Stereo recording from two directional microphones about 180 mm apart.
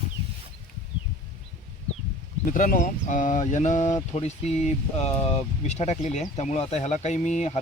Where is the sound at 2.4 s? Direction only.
50° left (ahead or behind).